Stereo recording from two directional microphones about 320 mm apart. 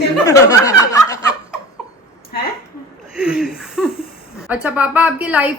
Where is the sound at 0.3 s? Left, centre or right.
Centre.